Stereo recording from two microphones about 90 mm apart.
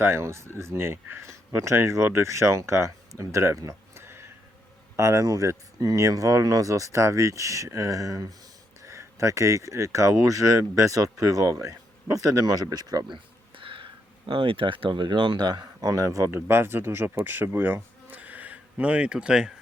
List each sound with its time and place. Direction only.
0.0 s speech: 30° right (ahead or behind); by 13.1 s 45° right (ahead or behind)
13.6 s a sound: 75° right (ahead or behind)
14.3 s speech: 80° right; by 19.5 s 10° right (ahead or behind)